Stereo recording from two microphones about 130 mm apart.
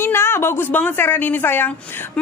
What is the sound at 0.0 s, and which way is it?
A woman's voice, 20° left (ahead or behind).